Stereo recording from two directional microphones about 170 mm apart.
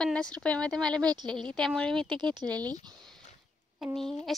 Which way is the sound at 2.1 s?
25° right (ahead or behind).